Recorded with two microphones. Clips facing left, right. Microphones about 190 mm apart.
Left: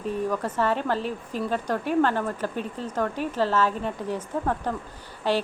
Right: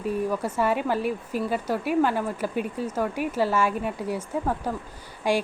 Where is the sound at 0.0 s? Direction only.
10° right (ahead or behind).